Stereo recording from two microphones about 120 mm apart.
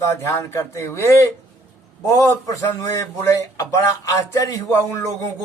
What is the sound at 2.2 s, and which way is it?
Speech, 25° left (ahead or behind).